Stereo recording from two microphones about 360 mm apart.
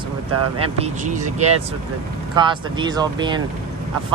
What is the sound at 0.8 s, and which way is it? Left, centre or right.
Speech, right.